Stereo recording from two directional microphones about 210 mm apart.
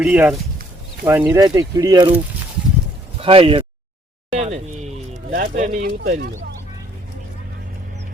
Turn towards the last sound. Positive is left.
turn(degrees=-40)  # may be behind; listen again after turning